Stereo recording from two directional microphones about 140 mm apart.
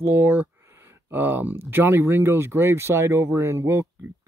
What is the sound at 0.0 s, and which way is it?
Speech, 15° right (ahead or behind).